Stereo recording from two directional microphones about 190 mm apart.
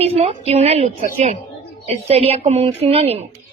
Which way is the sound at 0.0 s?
30° right (ahead or behind).